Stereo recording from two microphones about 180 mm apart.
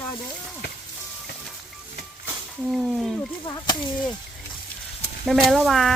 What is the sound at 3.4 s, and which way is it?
Speech, 20° left (ahead or behind).